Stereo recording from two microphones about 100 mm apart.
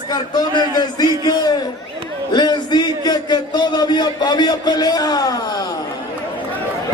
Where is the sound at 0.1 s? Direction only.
45° left (ahead or behind).